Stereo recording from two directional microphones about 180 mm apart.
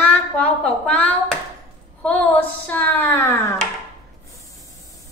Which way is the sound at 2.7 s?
10° left (ahead or behind).